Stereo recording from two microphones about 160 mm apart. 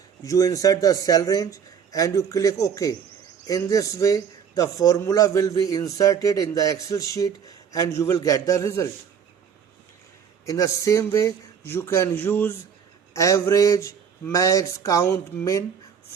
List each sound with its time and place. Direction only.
0.2 s a man's voice: 20° left (ahead or behind)
10.4 s a man's voice: 20° left (ahead or behind)